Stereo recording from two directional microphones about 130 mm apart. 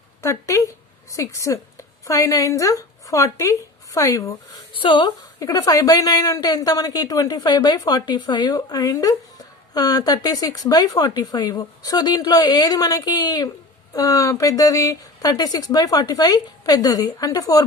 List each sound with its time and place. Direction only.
0.2 s speech: 25° left (ahead or behind)
4.7 s speech: 40° left (ahead or behind)